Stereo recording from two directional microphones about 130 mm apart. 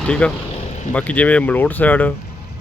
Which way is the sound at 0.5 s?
60° left (ahead or behind).